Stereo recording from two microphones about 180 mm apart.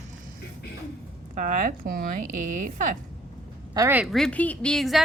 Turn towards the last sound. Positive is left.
turn(degrees=0)  # may be behind; listen again after turning